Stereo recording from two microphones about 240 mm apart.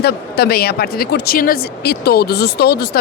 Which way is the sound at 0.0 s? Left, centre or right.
Left.